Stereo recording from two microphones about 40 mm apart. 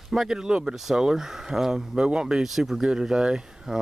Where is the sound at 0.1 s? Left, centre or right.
Centre.